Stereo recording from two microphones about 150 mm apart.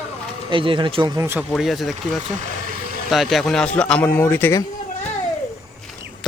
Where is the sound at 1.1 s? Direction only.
15° right (ahead or behind).